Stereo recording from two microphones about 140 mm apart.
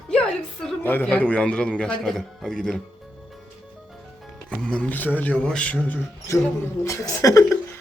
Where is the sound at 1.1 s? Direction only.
10° left (ahead or behind).